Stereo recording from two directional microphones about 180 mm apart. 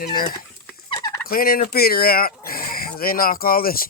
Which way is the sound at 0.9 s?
20° left (ahead or behind).